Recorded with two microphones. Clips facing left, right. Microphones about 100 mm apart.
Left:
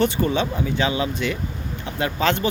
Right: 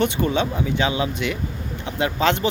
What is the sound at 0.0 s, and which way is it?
Speech, 20° right (ahead or behind).